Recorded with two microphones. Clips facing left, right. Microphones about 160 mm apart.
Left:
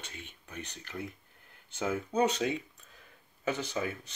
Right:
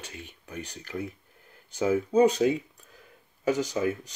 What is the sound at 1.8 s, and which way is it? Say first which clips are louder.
Speech: right 8 dB; 10° right (ahead or behind).